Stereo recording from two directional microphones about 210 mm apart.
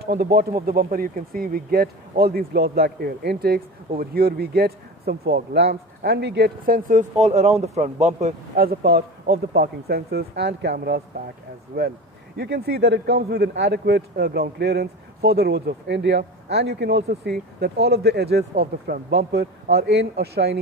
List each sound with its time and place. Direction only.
0.0 s speech: 50° right (ahead or behind)